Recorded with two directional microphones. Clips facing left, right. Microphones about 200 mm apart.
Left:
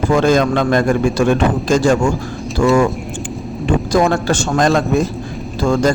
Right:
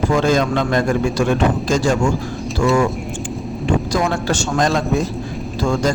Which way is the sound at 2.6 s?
50° left (ahead or behind).